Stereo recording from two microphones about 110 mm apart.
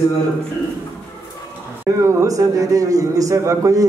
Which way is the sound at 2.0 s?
25° right (ahead or behind).